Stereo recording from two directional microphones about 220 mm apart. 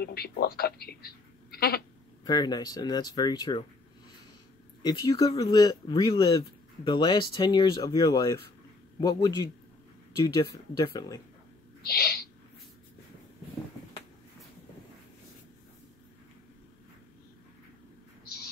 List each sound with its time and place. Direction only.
0.0 s a woman's voice: 45° left (ahead or behind)
2.2 s speech: 20° left (ahead or behind)
4.8 s speech: 20° left (ahead or behind)
11.8 s owl: 45° left (ahead or behind)